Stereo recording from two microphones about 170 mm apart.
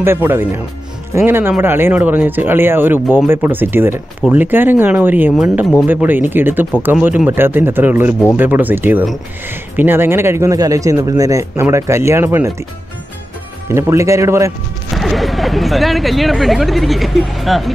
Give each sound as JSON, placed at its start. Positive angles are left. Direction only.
{"t": 0.0, "sound": "a man's voice", "side_deg": -15}
{"t": 13.7, "sound": "a man's voice", "side_deg": -15}
{"t": 15.0, "sound": "speech", "side_deg": 0}